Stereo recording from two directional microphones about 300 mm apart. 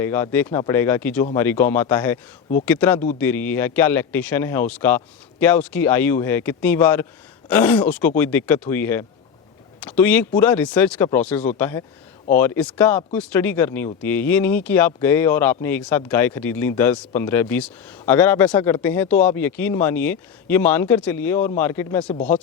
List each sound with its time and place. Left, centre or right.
0.0 s speech: centre